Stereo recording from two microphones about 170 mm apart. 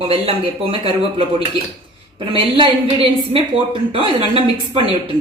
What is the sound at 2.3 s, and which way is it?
A woman's voice, 30° right (ahead or behind).